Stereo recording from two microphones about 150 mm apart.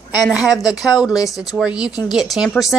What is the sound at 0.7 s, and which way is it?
Speech, 25° left (ahead or behind).